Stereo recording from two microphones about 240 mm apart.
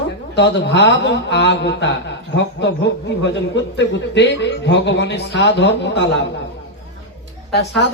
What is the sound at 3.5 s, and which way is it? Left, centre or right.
A man's voice, left.